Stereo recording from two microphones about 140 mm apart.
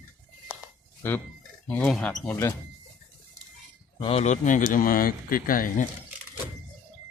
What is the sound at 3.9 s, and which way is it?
Speech, 40° left (ahead or behind).